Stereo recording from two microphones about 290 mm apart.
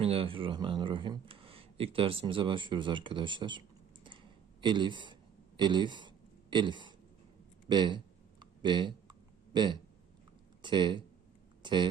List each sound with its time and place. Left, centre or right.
0.0 s speech: centre
4.6 s speech: centre
5.5 s a sound: centre
10.6 s speech: centre